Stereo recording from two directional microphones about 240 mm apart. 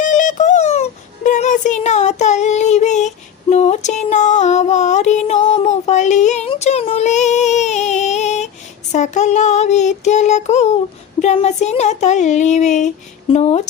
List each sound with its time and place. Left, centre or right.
0.0 s music: left
8.9 s child singing: left